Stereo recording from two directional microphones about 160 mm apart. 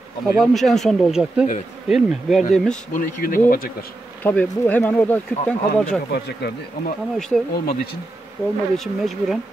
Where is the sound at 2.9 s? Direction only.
65° left (ahead or behind).